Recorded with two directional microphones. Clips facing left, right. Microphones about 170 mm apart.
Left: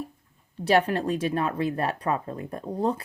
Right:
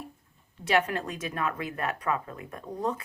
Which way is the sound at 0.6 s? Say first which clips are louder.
Left 5 dB; 35° left (ahead or behind).